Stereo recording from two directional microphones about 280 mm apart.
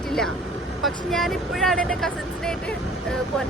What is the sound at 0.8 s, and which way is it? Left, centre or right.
Speech, centre.